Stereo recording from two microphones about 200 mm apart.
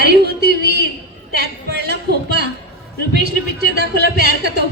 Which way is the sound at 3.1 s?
55° right (ahead or behind).